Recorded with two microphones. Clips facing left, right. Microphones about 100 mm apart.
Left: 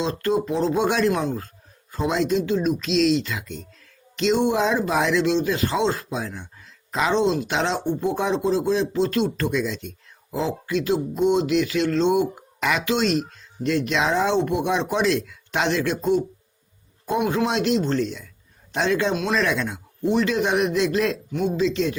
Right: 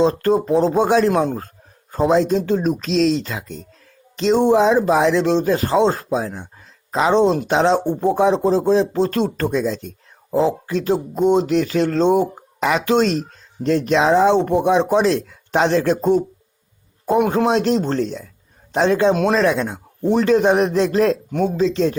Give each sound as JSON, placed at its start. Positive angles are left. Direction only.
{"t": 0.0, "sound": "speech", "side_deg": -40}
{"t": 7.1, "sound": "speech", "side_deg": -45}
{"t": 19.1, "sound": "speech", "side_deg": -45}
{"t": 19.4, "sound": "speech", "side_deg": -30}